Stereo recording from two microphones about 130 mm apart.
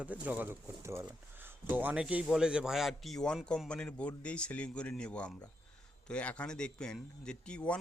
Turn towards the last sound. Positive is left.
turn(degrees=10)  # may be behind; listen again after turning